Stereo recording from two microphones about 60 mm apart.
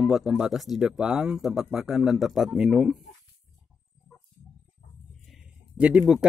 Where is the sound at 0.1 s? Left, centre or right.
Centre.